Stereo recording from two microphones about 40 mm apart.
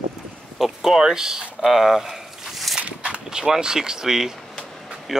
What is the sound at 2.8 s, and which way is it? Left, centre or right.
Walk, right.